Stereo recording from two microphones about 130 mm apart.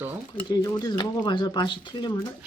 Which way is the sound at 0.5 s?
30° left (ahead or behind).